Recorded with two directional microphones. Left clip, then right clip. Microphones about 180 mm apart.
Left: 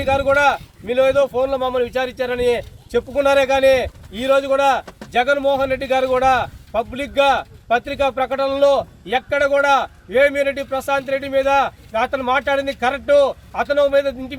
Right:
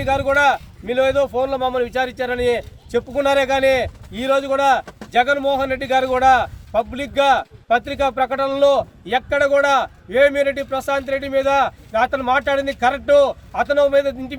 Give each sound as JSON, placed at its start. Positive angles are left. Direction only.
{"t": 0.1, "sound": "speech", "side_deg": -10}